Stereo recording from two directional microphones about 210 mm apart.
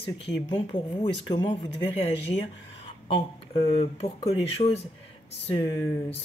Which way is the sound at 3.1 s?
25° left (ahead or behind).